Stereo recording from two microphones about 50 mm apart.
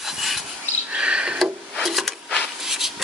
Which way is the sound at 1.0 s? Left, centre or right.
Right.